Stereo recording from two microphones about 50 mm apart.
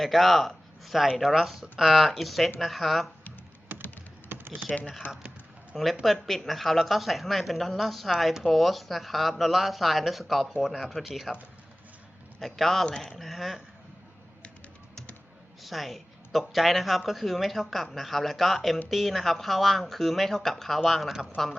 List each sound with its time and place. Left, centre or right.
0.0 s speech: centre
3.8 s typing: left
4.7 s speech: centre
5.0 s speech: left
5.7 s speech: centre
12.4 s speech: centre
15.6 s speech: centre